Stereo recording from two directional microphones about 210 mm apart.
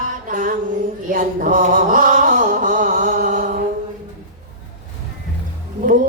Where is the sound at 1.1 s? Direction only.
40° right (ahead or behind).